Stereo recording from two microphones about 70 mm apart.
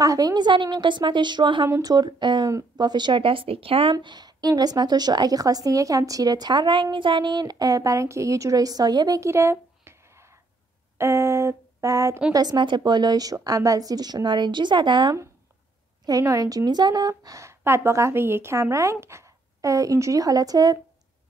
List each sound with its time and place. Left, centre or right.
0.0 s a woman's voice: right
1.8 s a woman's voice: right
9.2 s a sound: right
12.3 s a woman's voice: right
16.1 s a woman's voice: right
17.2 s a woman's voice: right